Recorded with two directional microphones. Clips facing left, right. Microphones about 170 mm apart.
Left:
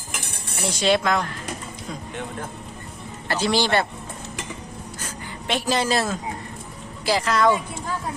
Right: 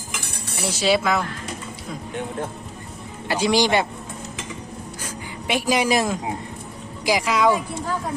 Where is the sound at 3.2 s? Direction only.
10° right (ahead or behind).